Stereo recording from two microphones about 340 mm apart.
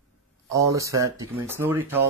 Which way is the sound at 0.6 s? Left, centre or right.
Centre.